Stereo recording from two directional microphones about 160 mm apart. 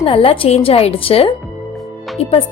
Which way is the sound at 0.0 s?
35° left (ahead or behind).